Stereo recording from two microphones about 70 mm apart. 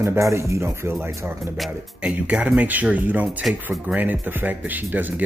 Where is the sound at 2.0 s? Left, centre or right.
Centre.